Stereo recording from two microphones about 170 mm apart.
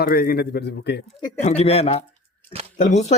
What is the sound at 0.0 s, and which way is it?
Speech, 60° left (ahead or behind).